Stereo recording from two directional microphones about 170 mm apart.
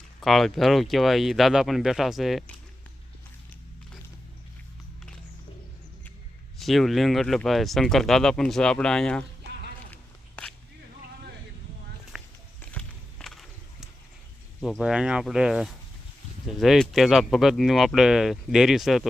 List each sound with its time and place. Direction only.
0.2 s speech: centre (ahead or behind)
6.6 s speech: centre (ahead or behind)
9.9 s a sound: 10° left (ahead or behind)
12.1 s a sound: centre (ahead or behind)
12.7 s walk: 5° left (ahead or behind)
14.6 s speech: centre (ahead or behind)